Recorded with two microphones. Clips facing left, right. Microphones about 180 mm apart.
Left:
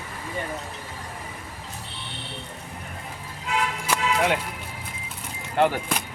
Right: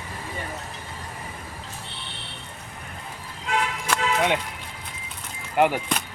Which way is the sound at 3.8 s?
5° left (ahead or behind).